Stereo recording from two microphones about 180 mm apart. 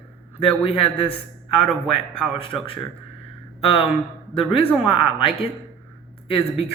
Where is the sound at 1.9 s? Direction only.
30° left (ahead or behind).